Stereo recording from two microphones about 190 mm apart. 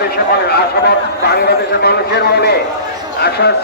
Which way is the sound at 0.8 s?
60° left (ahead or behind).